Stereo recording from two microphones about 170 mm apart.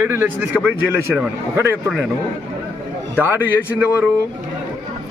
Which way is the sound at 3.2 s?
10° right (ahead or behind).